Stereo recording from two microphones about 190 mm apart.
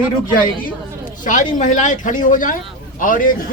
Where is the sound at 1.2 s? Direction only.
40° left (ahead or behind).